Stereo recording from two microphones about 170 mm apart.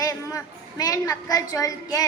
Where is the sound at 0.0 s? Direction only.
20° left (ahead or behind).